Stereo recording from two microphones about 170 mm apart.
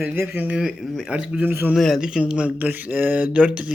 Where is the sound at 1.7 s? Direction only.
Centre (ahead or behind).